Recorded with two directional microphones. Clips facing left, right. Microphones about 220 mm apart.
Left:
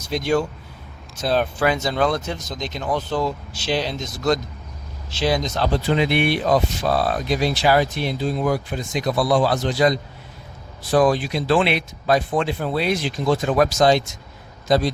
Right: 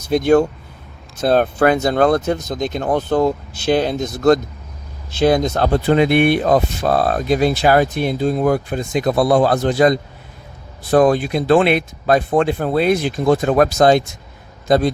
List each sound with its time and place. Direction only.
0.1 s speech: 55° right (ahead or behind)